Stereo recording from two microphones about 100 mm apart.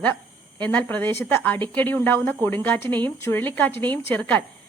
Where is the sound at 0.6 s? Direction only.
15° left (ahead or behind).